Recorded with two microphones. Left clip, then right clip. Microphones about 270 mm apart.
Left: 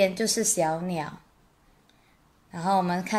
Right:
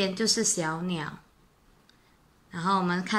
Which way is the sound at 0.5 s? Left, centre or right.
Left.